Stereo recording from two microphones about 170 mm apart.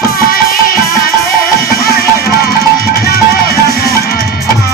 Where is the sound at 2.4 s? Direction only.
65° left (ahead or behind).